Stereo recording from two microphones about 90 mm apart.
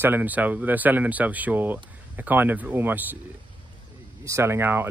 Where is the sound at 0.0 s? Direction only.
20° right (ahead or behind).